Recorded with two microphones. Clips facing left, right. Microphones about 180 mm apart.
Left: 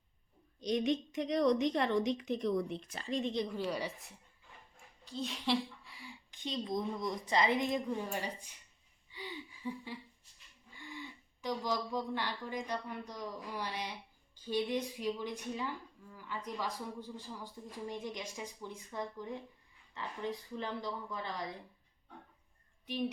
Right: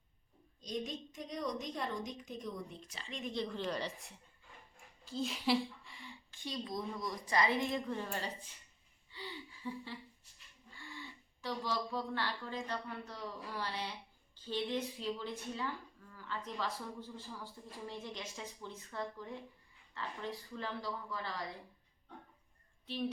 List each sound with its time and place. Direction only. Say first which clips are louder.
0.6 s a woman's voice: left 9 dB; 75° left (ahead or behind)
2.9 s a woman's voice: left 8 dB; 40° left (ahead or behind)
3.3 s a woman's voice: left 2 dB; 10° left (ahead or behind)
6.3 s a woman's voice: left 4 dB; 20° left (ahead or behind)
9.0 s gasp: left 2 dB; 15° left (ahead or behind)
10.8 s a woman's voice: left 3 dB; 15° left (ahead or behind)
22.9 s a woman's voice: left 2 dB; 15° left (ahead or behind)